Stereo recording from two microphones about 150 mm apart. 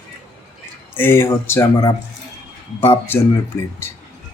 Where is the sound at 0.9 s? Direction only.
15° left (ahead or behind).